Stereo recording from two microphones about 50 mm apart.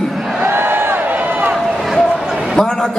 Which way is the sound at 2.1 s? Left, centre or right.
Centre.